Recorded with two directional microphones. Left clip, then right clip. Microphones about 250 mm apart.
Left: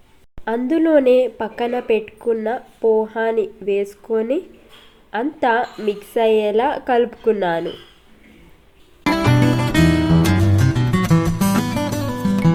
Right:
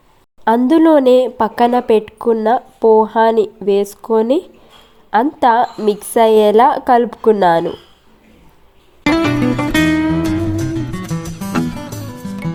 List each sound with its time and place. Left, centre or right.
0.4 s speech: right
9.0 s music: centre